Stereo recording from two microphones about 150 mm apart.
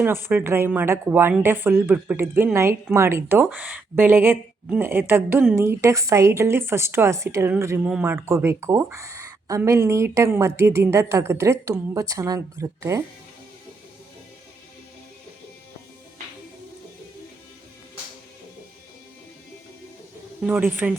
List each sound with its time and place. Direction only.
0.0 s speech: 15° right (ahead or behind)
20.4 s speech: 10° right (ahead or behind)